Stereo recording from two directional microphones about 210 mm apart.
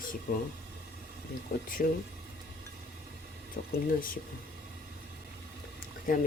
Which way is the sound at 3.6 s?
50° left (ahead or behind).